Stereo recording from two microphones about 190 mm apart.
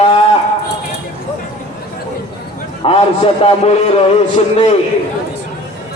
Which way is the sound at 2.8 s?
30° left (ahead or behind).